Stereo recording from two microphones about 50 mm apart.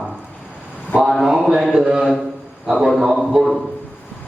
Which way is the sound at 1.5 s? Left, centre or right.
Centre.